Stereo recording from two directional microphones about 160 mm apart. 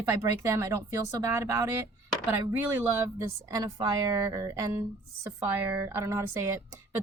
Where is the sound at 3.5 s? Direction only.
25° right (ahead or behind).